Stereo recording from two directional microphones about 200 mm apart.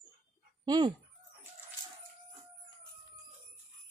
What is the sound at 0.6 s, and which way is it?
Speech, 20° right (ahead or behind).